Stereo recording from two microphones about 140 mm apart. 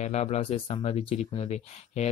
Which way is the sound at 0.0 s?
50° left (ahead or behind).